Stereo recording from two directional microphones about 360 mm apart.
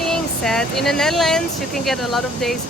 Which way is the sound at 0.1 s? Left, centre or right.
Centre.